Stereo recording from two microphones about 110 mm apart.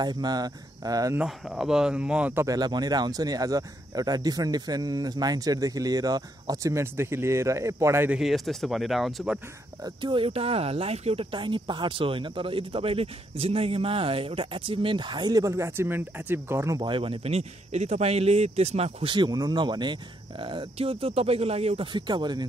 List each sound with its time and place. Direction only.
0.0 s speech: 40° right (ahead or behind)
1.1 s speech: 5° right (ahead or behind)
2.3 s speech: 35° right (ahead or behind)
8.1 s speech: centre (ahead or behind)
9.8 s speech: 50° right (ahead or behind)
11.3 s speech: 45° right (ahead or behind); by 16.7 s 20° right (ahead or behind)
16.7 s speech: 45° right (ahead or behind); by 19.0 s 75° right (ahead or behind)
19.0 s speech: 45° right (ahead or behind); by 21.8 s 65° right (ahead or behind)
21.9 s speech: 40° right (ahead or behind)